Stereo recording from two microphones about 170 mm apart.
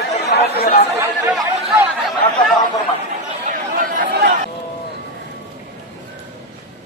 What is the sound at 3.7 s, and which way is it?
Chatter, 55° right (ahead or behind).